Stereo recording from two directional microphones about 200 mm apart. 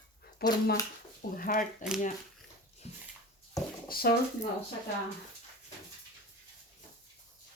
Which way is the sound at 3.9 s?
50° left (ahead or behind).